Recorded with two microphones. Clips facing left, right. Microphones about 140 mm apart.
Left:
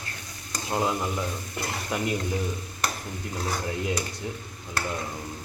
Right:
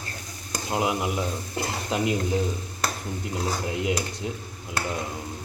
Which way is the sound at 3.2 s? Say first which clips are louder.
Right 2 dB; 20° right (ahead or behind).